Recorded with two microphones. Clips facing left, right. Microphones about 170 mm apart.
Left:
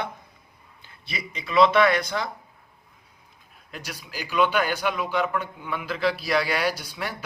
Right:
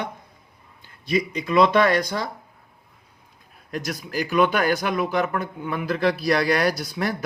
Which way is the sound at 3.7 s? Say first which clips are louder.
Right 9 dB; 45° right (ahead or behind).